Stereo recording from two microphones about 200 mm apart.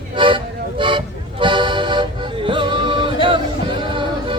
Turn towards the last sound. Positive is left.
turn(degrees=-25)  # may be behind; listen again after turning